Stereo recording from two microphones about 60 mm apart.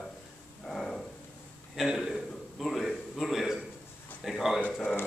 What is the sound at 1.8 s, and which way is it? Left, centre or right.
Speech, centre.